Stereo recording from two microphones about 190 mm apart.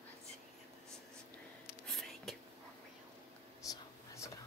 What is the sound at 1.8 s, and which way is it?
Whispering, centre (ahead or behind).